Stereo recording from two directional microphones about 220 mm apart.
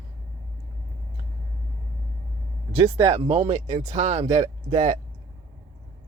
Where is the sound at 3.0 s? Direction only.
30° right (ahead or behind).